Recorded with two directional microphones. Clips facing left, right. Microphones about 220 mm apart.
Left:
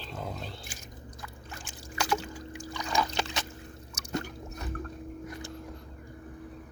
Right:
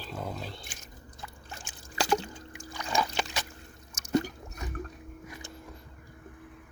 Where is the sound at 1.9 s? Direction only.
30° right (ahead or behind).